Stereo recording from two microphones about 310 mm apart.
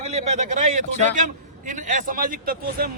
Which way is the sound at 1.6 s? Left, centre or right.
Right.